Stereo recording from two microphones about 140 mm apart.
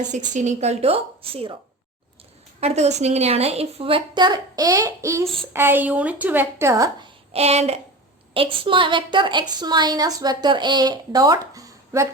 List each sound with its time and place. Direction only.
0.3 s a woman's voice: 55° right (ahead or behind)
2.6 s a woman's voice: 50° right (ahead or behind); by 7.1 s 25° right (ahead or behind)
7.3 s a woman's voice: 50° right (ahead or behind); by 12.0 s 25° right (ahead or behind)